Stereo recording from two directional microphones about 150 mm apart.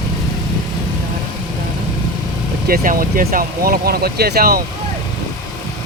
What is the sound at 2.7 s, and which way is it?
Speech, 70° right (ahead or behind).